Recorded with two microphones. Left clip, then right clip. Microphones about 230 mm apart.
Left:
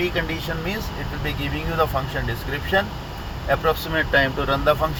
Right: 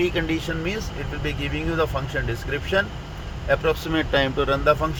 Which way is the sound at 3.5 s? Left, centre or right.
Right.